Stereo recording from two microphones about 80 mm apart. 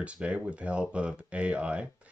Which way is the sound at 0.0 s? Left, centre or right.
Centre.